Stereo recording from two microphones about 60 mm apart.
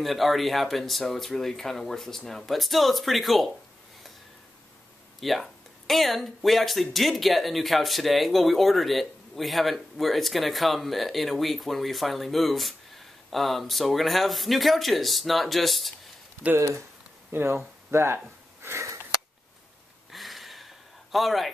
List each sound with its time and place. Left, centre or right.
0.0 s speech: centre
5.2 s speech: centre
17.3 s speech: right
17.9 s sniff: right
20.1 s a sound: centre